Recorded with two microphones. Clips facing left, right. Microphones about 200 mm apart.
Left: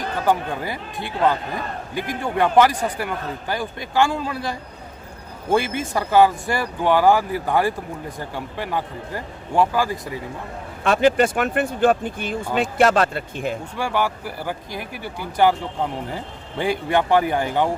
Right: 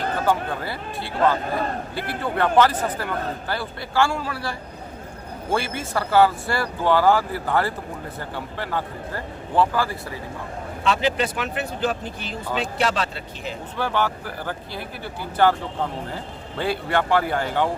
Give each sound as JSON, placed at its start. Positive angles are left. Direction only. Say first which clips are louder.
{"t": 0.3, "sound": "speech", "louder": "left 4 dB", "side_deg": 15}
{"t": 10.8, "sound": "speech", "louder": "left 6 dB", "side_deg": 50}
{"t": 13.7, "sound": "speech", "louder": "right 2 dB", "side_deg": 10}